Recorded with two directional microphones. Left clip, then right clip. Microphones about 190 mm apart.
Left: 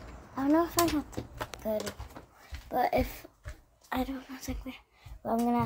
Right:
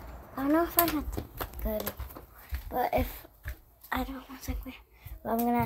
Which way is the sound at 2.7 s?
25° left (ahead or behind).